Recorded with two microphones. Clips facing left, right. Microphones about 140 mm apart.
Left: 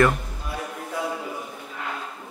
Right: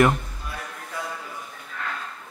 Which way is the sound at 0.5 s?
15° left (ahead or behind).